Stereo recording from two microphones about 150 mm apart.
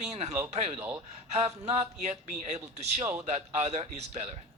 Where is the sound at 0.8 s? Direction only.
10° right (ahead or behind).